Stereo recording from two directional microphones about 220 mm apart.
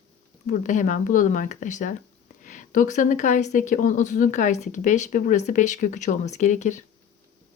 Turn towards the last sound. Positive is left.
turn(degrees=35)  # may be behind; listen again after turning